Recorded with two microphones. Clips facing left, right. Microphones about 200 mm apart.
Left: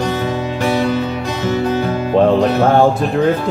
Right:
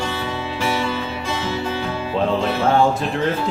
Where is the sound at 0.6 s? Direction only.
50° left (ahead or behind).